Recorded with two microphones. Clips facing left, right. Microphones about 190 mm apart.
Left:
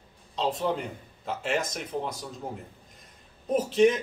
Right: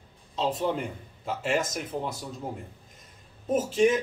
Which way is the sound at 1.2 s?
5° right (ahead or behind).